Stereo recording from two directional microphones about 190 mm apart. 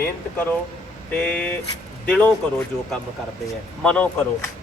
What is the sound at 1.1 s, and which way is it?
Speech, 5° left (ahead or behind).